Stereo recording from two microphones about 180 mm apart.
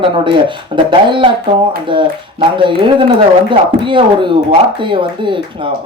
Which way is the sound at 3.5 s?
25° right (ahead or behind).